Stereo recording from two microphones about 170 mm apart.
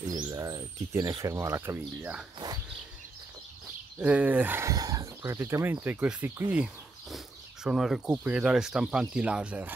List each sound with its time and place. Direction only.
0.0 s speech: 20° right (ahead or behind)
4.0 s speech: 10° right (ahead or behind)